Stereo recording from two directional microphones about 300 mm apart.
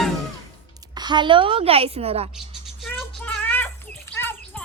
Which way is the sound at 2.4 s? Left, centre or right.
Centre.